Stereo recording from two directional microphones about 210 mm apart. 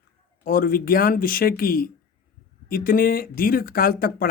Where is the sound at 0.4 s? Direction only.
45° left (ahead or behind).